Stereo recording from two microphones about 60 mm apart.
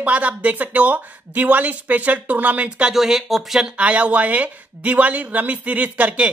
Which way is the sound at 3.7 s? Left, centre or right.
Right.